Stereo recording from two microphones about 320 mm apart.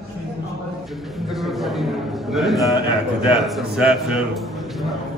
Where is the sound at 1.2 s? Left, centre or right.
Centre.